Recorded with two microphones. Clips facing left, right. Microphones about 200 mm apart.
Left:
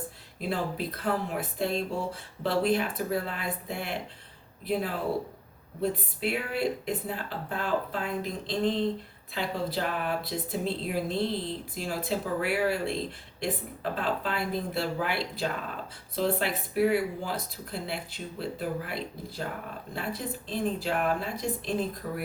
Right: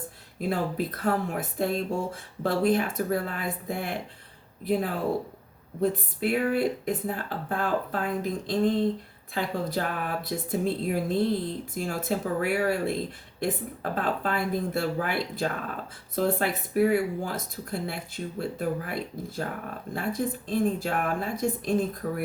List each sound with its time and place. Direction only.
0.3 s speech: 50° right (ahead or behind)